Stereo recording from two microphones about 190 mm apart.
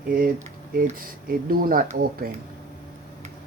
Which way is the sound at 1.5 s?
50° right (ahead or behind).